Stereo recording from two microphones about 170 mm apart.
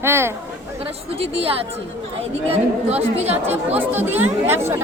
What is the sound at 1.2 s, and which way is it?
Speech, 35° right (ahead or behind).